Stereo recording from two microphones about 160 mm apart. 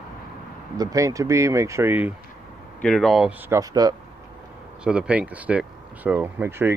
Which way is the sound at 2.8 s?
5° left (ahead or behind).